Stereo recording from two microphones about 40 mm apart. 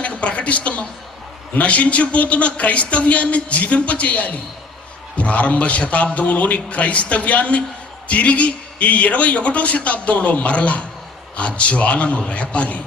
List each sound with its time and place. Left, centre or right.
0.0 s a man's voice: left